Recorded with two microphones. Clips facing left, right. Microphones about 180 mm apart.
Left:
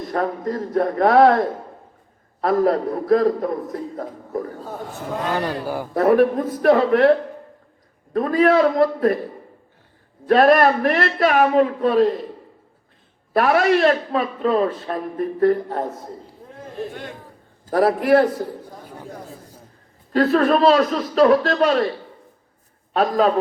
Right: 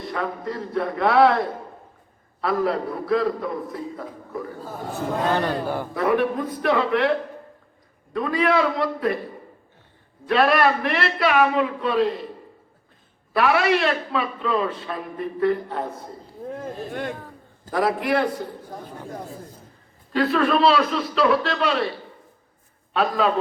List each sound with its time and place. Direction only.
0.1 s a man's voice: 45° left (ahead or behind)
5.6 s a man's voice: 10° left (ahead or behind)
5.9 s a man's voice: 40° left (ahead or behind)
8.1 s a man's voice: 40° left (ahead or behind)
10.2 s a man's voice: 45° left (ahead or behind)
13.3 s a man's voice: 40° left (ahead or behind)
16.9 s speech: 55° right (ahead or behind)
17.7 s a man's voice: 40° left (ahead or behind)
20.1 s a man's voice: 40° left (ahead or behind)
22.9 s a man's voice: 40° left (ahead or behind)